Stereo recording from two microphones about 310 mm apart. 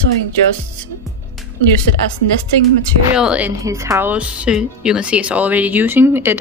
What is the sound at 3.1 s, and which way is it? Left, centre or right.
Speech, centre.